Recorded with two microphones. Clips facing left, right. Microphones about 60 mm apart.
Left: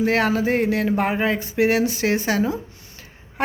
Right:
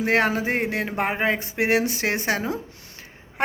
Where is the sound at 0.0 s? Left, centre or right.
Right.